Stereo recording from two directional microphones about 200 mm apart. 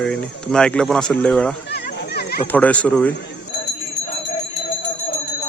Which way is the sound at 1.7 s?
55° left (ahead or behind).